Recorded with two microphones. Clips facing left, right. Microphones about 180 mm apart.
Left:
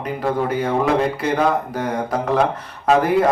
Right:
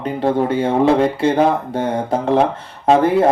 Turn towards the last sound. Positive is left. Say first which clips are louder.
# right 3 dB
turn(degrees=-25)  # may be behind; listen again after turning